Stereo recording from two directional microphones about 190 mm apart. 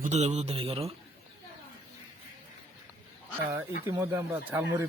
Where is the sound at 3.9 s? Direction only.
15° right (ahead or behind).